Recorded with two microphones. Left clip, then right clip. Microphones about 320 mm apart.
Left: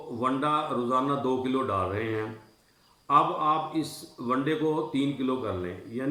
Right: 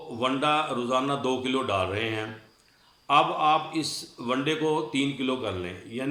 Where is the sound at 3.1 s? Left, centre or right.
Centre.